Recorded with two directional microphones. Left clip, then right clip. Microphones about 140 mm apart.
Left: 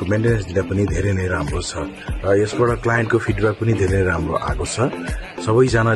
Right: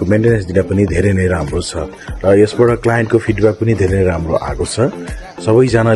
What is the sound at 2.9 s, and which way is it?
A man's voice, 25° right (ahead or behind).